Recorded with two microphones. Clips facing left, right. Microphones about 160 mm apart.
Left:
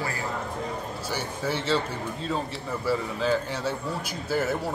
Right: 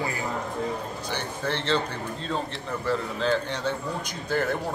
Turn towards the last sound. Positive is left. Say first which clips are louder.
# even
turn(degrees=5)  # may be behind; listen again after turning